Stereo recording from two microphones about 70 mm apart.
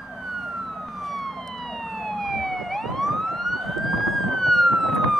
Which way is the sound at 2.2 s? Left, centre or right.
Centre.